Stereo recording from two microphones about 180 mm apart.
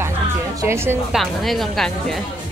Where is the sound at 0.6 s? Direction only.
15° right (ahead or behind).